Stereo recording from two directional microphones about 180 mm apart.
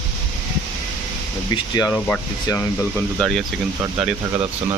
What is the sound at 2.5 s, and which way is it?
Speech, 5° left (ahead or behind).